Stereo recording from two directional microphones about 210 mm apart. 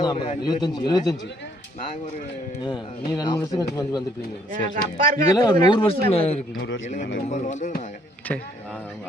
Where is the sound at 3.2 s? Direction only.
20° left (ahead or behind).